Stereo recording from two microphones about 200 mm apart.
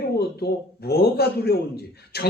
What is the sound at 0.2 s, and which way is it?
A man's voice, 50° left (ahead or behind).